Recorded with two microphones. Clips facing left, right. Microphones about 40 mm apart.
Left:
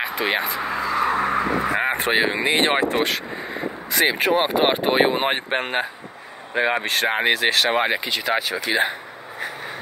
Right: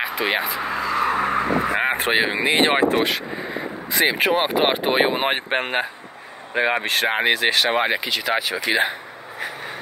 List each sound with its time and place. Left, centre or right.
0.0 s vehicle: centre
1.8 s speech: centre
4.6 s speech: centre
5.6 s speech: centre
8.7 s speech: right